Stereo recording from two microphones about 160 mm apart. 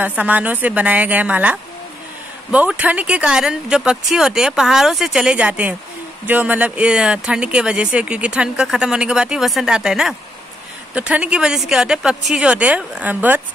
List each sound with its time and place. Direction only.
0.0 s speech: 10° right (ahead or behind)